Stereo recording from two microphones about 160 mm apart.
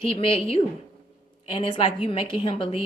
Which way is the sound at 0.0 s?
35° left (ahead or behind).